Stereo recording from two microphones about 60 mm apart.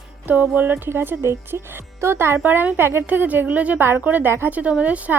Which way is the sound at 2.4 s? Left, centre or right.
Right.